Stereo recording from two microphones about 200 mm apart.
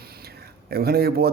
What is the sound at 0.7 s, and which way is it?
Speech, 50° right (ahead or behind).